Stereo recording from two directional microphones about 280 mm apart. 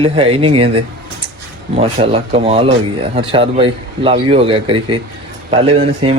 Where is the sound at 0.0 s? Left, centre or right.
Centre.